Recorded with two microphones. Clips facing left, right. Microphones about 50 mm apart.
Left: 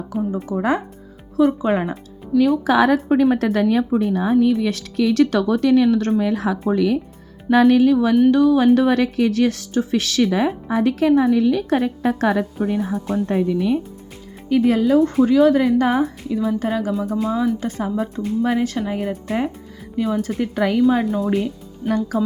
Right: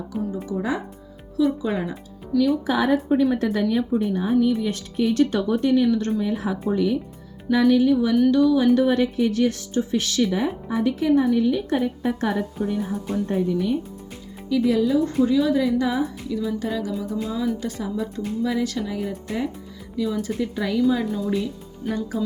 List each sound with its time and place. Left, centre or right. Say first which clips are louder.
0.1 s speech: left 5 dB; centre
0.5 s a woman's voice: left 6 dB; left
2.7 s a woman's voice: left 5 dB; left
7.5 s speech: left 4 dB; left
8.3 s speech: left 3 dB; left
13.2 s a woman's voice: left 3 dB; left
14.5 s a woman's voice: left 4 dB; left
20.2 s a woman's voice: left 5 dB; left